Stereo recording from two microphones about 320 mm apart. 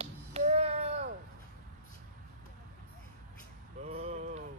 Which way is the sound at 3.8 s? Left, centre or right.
Right.